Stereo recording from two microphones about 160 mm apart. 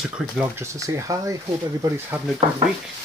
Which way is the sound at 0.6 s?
20° right (ahead or behind).